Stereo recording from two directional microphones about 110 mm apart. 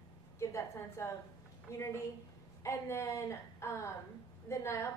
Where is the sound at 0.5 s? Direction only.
25° left (ahead or behind).